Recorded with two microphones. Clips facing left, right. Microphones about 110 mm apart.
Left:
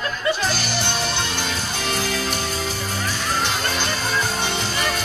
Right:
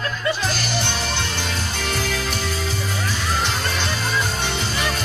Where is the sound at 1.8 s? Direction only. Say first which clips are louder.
Left 1 dB; 30° left (ahead or behind).